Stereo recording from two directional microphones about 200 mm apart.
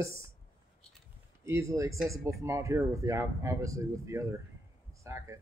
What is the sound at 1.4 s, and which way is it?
Speech, 15° right (ahead or behind).